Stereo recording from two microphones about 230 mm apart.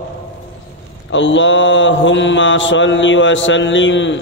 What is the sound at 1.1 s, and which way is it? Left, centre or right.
Mantra, left.